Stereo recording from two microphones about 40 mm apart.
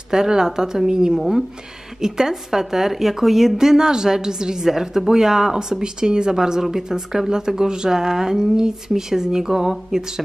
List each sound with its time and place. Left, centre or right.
0.1 s a woman's voice: centre